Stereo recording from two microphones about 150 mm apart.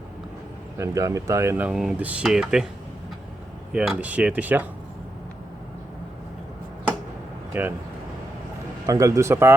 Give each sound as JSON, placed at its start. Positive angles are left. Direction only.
{"t": 0.8, "sound": "speech", "side_deg": -20}
{"t": 3.7, "sound": "speech", "side_deg": -10}
{"t": 7.5, "sound": "speech", "side_deg": -15}
{"t": 8.9, "sound": "speech", "side_deg": -20}